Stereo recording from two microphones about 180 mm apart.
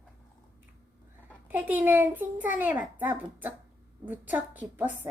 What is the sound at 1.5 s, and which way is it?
A woman's voice, 10° right (ahead or behind).